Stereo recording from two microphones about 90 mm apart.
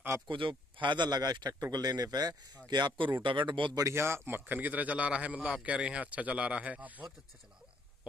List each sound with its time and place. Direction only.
0.3 s speech: 70° right (ahead or behind)
3.7 s a man's voice: 30° right (ahead or behind)